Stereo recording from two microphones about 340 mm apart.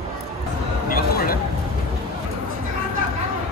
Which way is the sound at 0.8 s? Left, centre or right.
Left.